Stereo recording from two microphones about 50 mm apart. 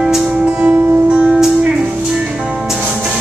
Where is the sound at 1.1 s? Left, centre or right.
Right.